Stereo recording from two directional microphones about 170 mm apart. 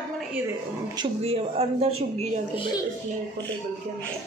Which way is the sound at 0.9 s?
35° right (ahead or behind).